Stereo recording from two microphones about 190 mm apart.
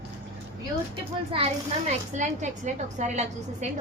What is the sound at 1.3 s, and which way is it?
A woman's voice, 35° right (ahead or behind).